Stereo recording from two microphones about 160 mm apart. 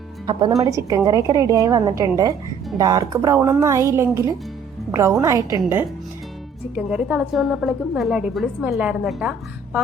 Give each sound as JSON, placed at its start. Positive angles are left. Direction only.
{"t": 0.3, "sound": "a woman's voice", "side_deg": -30}